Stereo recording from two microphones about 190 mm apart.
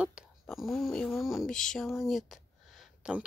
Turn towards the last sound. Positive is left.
turn(degrees=-5)  # may be behind; listen again after turning